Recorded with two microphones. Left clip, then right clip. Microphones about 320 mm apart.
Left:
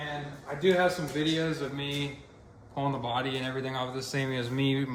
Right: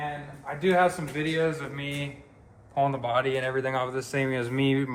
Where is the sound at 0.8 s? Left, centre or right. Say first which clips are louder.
Right 2 dB; right.